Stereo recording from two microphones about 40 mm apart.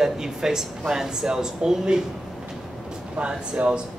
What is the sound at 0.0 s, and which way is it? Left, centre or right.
Speech, centre.